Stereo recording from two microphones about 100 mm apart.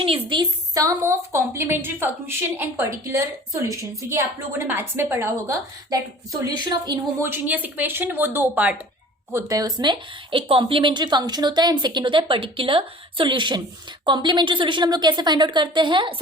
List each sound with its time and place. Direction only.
0.0 s a woman's voice: 60° right (ahead or behind)
0.7 s a woman's voice: 35° right (ahead or behind)
7.2 s a woman's voice: 20° right (ahead or behind)
9.3 s speech: 35° right (ahead or behind)
10.5 s a woman's voice: 60° right (ahead or behind)